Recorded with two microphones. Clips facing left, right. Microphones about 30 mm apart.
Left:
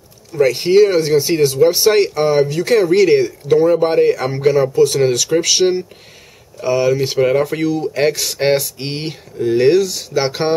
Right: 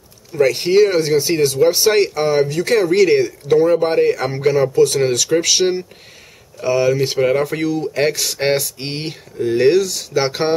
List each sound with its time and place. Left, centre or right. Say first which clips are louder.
0.3 s speech: left 2 dB; centre